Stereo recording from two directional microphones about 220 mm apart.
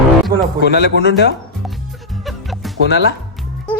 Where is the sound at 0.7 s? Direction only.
50° left (ahead or behind).